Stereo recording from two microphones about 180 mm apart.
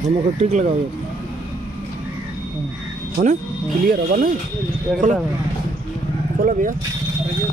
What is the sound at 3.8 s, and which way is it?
Speech, 50° right (ahead or behind).